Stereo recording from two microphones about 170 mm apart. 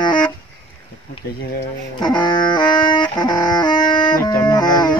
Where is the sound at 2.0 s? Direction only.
25° left (ahead or behind).